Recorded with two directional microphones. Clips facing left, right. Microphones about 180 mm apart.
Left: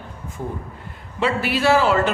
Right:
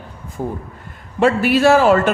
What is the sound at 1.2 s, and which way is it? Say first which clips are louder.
Speech: right 7 dB; 50° right (ahead or behind).